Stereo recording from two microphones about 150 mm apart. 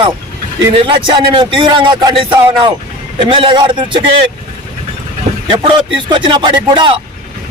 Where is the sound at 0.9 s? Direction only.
35° right (ahead or behind).